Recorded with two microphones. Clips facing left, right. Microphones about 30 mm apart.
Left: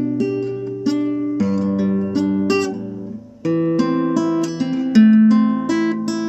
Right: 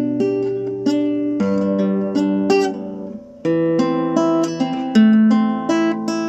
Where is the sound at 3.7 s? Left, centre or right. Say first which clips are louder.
Right 1 dB; centre.